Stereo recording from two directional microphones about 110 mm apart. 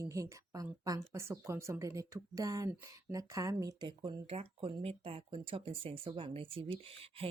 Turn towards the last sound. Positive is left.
turn(degrees=-60)  # may be behind; listen again after turning